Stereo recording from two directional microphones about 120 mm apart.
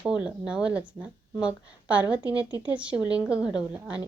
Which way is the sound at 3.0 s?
10° right (ahead or behind).